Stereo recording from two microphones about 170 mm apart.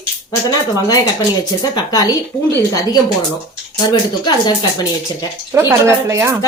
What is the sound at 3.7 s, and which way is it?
Speech, 25° left (ahead or behind).